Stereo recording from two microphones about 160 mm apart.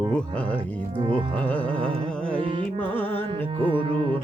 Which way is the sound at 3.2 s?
30° right (ahead or behind).